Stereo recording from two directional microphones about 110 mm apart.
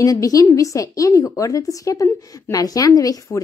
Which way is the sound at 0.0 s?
30° left (ahead or behind).